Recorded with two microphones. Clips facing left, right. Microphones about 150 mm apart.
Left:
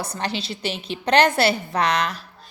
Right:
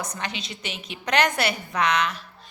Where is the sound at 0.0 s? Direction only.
35° left (ahead or behind).